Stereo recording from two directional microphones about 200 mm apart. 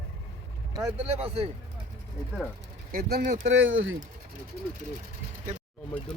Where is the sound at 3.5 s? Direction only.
70° right (ahead or behind).